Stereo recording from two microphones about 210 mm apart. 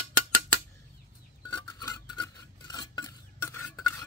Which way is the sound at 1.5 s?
15° left (ahead or behind).